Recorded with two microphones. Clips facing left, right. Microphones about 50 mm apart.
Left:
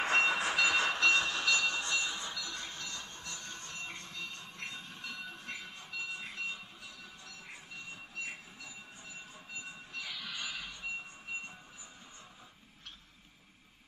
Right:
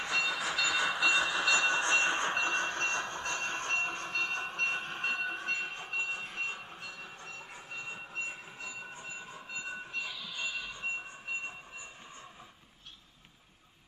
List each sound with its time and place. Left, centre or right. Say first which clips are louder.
0.0 s train: left 3 dB; centre
1.6 s train: right 6 dB; right
10.3 s train: right 5 dB; left
10.6 s train: right 4 dB; right